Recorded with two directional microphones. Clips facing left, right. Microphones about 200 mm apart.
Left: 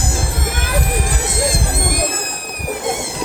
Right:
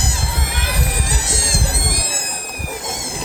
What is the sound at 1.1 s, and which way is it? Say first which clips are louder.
Music: left 5 dB; 55° left (ahead or behind).